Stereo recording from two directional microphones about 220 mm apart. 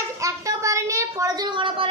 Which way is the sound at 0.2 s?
15° right (ahead or behind).